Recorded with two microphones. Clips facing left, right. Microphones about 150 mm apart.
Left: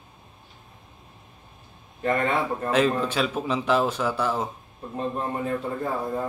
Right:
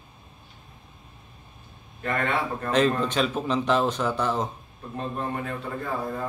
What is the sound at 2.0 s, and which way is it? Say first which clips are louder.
Speech: left 3 dB; 25° left (ahead or behind).